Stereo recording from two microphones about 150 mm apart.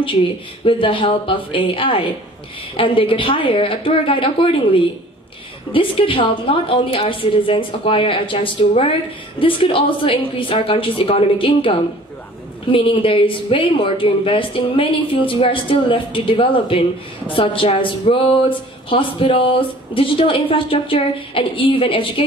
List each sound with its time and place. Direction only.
0.7 s speech: 35° left (ahead or behind)
12.7 s speech: 35° left (ahead or behind)